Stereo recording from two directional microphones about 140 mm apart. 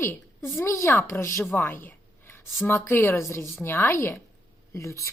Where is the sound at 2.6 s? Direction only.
15° left (ahead or behind).